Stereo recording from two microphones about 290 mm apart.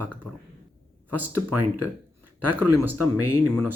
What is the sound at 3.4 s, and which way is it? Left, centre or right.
Speech, centre.